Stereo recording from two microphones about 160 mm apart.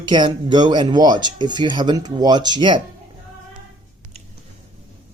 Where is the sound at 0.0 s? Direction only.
30° right (ahead or behind).